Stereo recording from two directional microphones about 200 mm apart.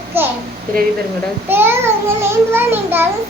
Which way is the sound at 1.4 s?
10° right (ahead or behind).